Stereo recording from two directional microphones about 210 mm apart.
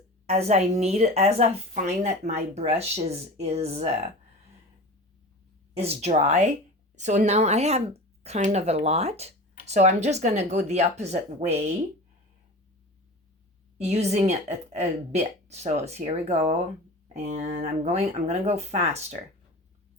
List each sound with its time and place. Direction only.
0.3 s a woman's voice: 30° right (ahead or behind)
5.7 s a woman's voice: 30° right (ahead or behind)
13.7 s a woman's voice: 30° right (ahead or behind)